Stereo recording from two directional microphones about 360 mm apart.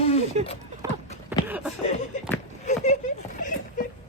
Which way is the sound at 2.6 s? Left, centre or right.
Centre.